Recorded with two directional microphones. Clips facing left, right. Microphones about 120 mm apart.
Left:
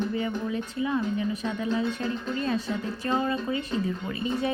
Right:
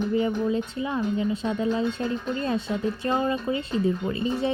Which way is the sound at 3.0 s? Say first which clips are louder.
Even; 25° right (ahead or behind).